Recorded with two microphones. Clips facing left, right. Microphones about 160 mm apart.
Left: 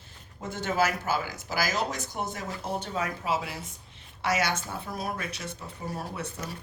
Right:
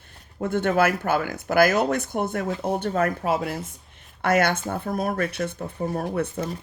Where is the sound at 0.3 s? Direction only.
60° right (ahead or behind).